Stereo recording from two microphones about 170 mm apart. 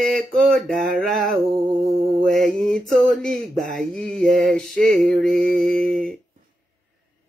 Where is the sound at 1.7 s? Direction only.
55° right (ahead or behind).